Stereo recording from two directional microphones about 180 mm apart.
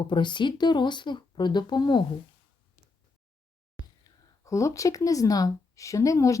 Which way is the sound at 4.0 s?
15° left (ahead or behind).